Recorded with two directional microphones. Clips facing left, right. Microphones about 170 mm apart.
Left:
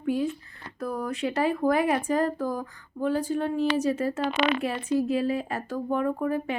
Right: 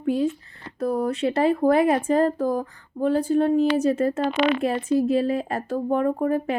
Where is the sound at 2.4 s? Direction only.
45° right (ahead or behind).